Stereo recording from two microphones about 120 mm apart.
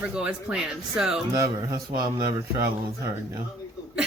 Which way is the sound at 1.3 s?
30° right (ahead or behind).